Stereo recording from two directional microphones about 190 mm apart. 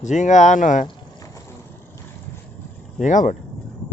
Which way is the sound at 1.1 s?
15° left (ahead or behind).